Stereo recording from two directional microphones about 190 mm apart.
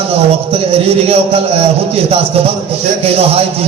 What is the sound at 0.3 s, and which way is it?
A man's voice, 30° right (ahead or behind).